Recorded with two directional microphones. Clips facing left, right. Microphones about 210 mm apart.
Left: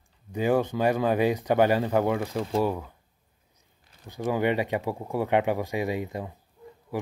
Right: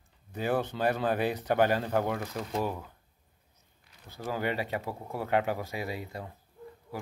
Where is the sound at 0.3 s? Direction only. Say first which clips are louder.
Left 6 dB; 10° left (ahead or behind).